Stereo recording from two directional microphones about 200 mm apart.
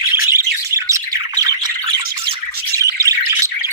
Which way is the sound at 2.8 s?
15° right (ahead or behind).